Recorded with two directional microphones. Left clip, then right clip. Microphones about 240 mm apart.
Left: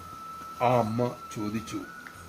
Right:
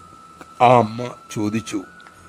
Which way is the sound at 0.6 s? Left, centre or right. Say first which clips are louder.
Right 11 dB; right.